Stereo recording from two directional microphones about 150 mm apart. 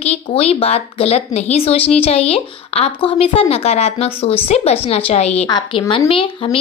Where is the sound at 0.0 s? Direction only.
45° left (ahead or behind).